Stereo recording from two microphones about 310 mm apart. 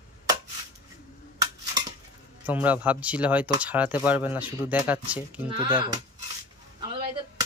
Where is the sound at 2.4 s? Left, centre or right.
Centre.